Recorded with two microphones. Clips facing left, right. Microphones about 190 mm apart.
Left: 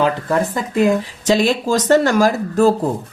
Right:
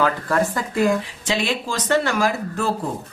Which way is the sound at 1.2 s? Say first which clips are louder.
Left 8 dB; 40° left (ahead or behind).